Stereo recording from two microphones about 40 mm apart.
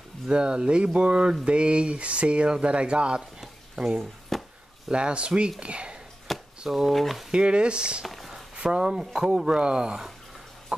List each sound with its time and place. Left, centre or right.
0.3 s speech: right
3.8 s speech: centre
4.3 s chop: centre
4.9 s speech: right
6.3 s a sound: centre
6.9 s speech: centre
7.2 s speech: right
10.7 s chicken: right